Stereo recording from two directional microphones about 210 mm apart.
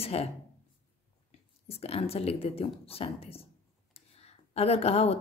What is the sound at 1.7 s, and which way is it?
A woman's voice, 30° left (ahead or behind).